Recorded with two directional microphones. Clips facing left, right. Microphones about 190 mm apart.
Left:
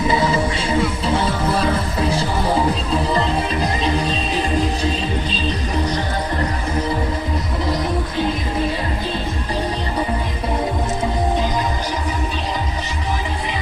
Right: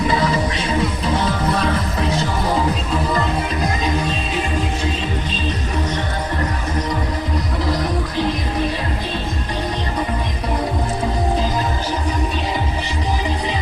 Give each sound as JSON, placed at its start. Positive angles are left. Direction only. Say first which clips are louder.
{"t": 0.1, "sound": "music", "louder": "left 1 dB", "side_deg": 25}